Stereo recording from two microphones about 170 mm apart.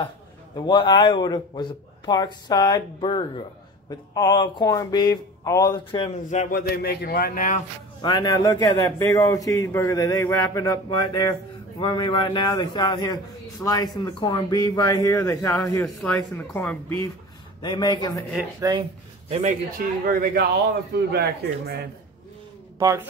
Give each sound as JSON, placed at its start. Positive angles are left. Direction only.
{"t": 0.6, "sound": "a man's voice", "side_deg": 25}
{"t": 6.5, "sound": "a man's voice", "side_deg": 70}
{"t": 8.0, "sound": "a man's voice", "side_deg": 25}
{"t": 17.6, "sound": "a man's voice", "side_deg": 25}
{"t": 18.6, "sound": "speech", "side_deg": -30}
{"t": 20.1, "sound": "speech", "side_deg": -60}
{"t": 22.8, "sound": "speech", "side_deg": -20}